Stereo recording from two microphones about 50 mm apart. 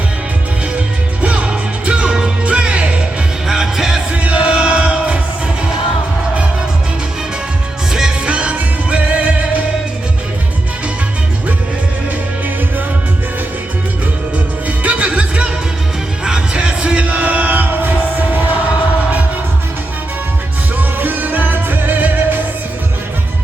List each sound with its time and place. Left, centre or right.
1.2 s music: right
3.4 s music: centre
4.1 s music: right
7.9 s music: centre
14.3 s music: right
21.0 s music: right